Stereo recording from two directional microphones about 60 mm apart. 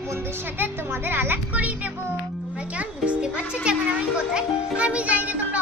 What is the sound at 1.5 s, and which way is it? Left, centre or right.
A child's voice, right.